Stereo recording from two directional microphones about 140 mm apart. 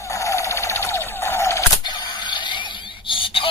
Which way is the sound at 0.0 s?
20° left (ahead or behind).